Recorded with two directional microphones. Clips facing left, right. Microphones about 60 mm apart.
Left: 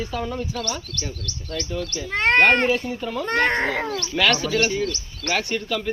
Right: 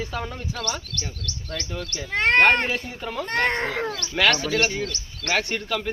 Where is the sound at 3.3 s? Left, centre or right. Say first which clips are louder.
Left 3 dB; centre.